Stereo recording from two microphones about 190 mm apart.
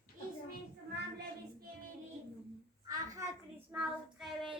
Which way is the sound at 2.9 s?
15° right (ahead or behind).